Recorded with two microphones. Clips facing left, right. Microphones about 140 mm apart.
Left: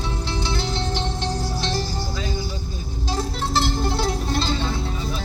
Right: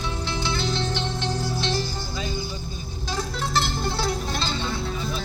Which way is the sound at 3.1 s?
30° left (ahead or behind).